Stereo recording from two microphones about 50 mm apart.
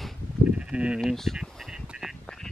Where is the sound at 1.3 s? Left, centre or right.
Centre.